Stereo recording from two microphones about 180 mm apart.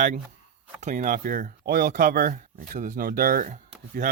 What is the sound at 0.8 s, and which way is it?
Speech, 40° right (ahead or behind).